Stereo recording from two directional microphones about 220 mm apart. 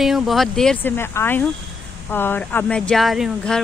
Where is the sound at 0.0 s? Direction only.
Centre (ahead or behind).